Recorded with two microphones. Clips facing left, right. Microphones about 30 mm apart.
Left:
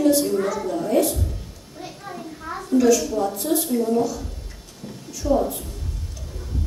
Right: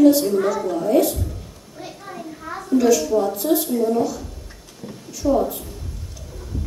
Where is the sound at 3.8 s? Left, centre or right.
Centre.